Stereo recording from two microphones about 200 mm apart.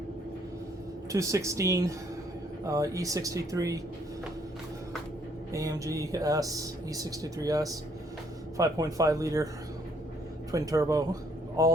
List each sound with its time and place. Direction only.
1.1 s speech: 15° right (ahead or behind)
5.5 s speech: 15° right (ahead or behind)
10.5 s speech: 15° right (ahead or behind)